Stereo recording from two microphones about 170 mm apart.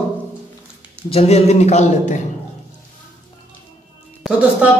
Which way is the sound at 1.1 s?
40° left (ahead or behind).